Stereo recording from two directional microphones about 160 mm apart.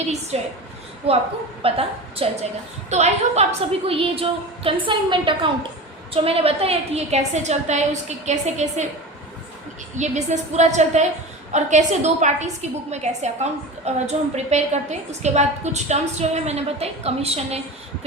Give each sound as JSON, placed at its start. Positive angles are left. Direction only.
{"t": 0.3, "sound": "a woman's voice", "side_deg": -40}
{"t": 9.9, "sound": "a woman's voice", "side_deg": -45}